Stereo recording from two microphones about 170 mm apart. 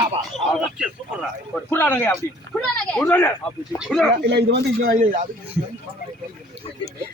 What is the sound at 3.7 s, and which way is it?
Speech, centre (ahead or behind).